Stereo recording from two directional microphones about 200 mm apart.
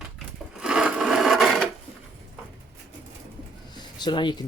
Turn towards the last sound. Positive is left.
turn(degrees=20)  # may be behind; listen again after turning